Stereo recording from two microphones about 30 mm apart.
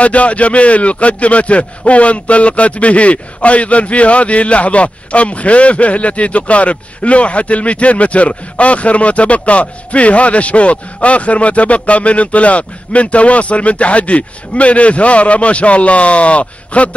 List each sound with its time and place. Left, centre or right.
0.0 s speech: left